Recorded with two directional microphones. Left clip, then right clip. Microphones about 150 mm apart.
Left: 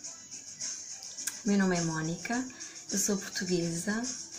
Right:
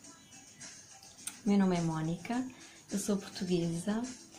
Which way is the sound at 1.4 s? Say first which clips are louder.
Left 2 dB; 15° right (ahead or behind).